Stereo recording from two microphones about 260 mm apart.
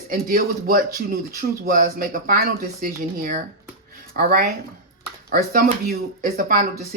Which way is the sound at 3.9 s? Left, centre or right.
Right.